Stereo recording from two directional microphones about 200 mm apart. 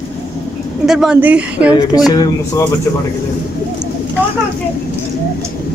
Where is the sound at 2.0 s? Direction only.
20° left (ahead or behind).